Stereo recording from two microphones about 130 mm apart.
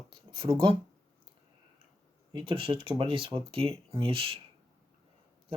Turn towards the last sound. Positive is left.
turn(degrees=-45)  # may be behind; listen again after turning